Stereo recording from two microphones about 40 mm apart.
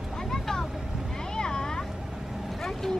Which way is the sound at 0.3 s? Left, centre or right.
Centre.